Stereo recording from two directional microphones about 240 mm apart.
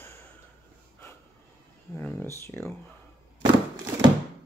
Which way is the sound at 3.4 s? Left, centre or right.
Centre.